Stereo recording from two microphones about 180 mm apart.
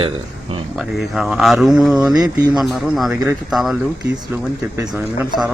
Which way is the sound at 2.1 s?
20° right (ahead or behind).